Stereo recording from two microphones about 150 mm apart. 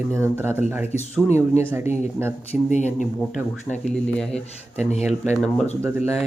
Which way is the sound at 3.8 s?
5° left (ahead or behind).